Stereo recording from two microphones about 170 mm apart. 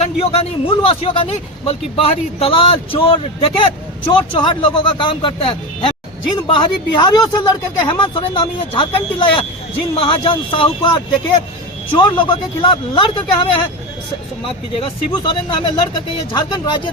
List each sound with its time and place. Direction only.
0.0 s a man's voice: 35° left (ahead or behind)
11.9 s speech: 30° left (ahead or behind)